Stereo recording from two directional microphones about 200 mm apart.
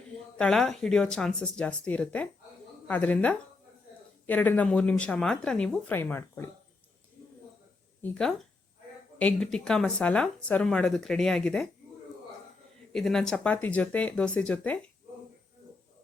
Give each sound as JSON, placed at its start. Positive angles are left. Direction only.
{"t": 0.3, "sound": "speech", "side_deg": 5}
{"t": 8.0, "sound": "speech", "side_deg": 5}
{"t": 12.9, "sound": "speech", "side_deg": 0}